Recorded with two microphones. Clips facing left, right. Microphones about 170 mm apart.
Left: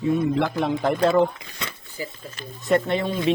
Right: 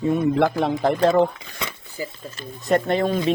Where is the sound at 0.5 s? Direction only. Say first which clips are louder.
Right 2 dB; 35° right (ahead or behind).